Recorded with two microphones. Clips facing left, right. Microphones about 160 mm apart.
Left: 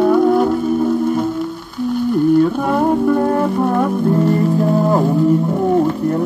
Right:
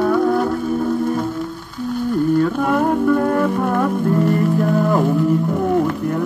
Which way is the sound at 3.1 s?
25° left (ahead or behind).